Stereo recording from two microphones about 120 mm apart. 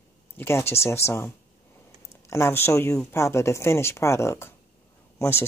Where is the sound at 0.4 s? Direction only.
20° left (ahead or behind).